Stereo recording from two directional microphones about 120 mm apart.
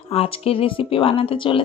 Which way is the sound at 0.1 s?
55° left (ahead or behind).